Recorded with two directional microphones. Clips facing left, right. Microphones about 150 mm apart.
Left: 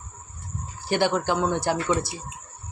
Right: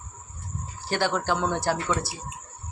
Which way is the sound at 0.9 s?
15° left (ahead or behind).